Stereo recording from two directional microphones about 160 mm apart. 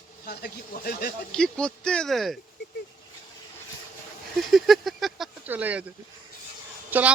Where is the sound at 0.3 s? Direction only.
80° left.